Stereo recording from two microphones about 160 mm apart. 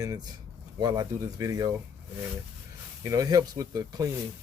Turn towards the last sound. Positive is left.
turn(degrees=-20)  # may be behind; listen again after turning